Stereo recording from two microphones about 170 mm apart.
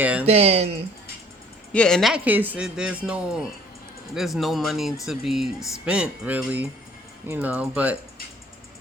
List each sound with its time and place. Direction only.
0.0 s speech: 10° right (ahead or behind)
0.3 s speech: 40° right (ahead or behind)
1.7 s speech: 5° left (ahead or behind)